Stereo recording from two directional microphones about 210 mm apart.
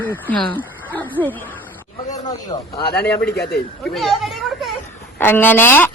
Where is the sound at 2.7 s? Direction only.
50° left (ahead or behind).